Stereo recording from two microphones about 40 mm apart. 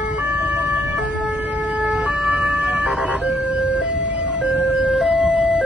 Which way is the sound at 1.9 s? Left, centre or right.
Right.